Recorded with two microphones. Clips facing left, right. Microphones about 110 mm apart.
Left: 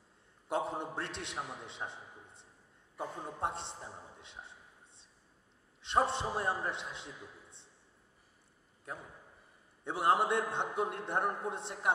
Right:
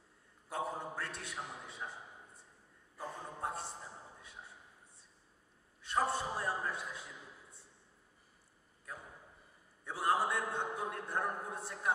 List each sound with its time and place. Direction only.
0.5 s a man's voice: 25° left (ahead or behind)
4.2 s a sound: 25° left (ahead or behind)
5.8 s a man's voice: 25° left (ahead or behind)
9.8 s a man's voice: 25° left (ahead or behind)